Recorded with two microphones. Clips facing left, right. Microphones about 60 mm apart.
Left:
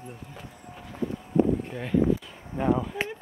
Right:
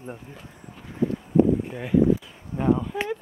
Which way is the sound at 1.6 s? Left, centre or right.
Centre.